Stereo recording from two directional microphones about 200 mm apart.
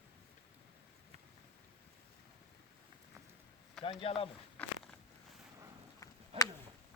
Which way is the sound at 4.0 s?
25° left (ahead or behind).